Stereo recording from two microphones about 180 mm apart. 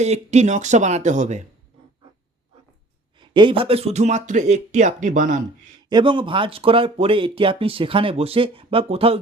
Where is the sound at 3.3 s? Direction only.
30° right (ahead or behind); by 5.4 s 45° right (ahead or behind).